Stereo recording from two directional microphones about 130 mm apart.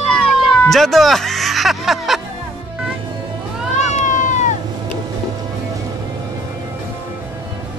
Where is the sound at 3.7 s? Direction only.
70° left (ahead or behind).